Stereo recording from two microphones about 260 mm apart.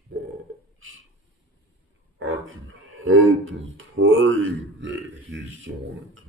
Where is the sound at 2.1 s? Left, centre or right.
Right.